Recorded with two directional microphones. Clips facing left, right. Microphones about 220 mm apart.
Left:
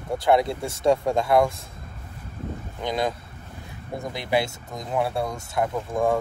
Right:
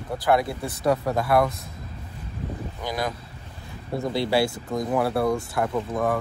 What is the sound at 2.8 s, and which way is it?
A man's voice, 25° left (ahead or behind).